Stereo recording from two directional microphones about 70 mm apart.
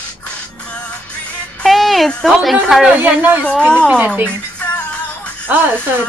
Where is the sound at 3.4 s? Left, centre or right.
Centre.